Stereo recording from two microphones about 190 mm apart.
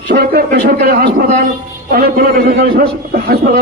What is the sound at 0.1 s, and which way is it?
A man's voice, 50° right (ahead or behind).